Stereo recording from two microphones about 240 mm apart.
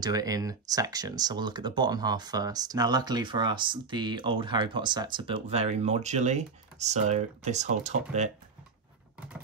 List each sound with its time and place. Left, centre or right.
0.0 s speech: centre